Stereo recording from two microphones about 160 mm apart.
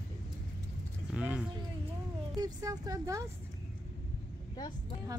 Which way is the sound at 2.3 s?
25° right (ahead or behind).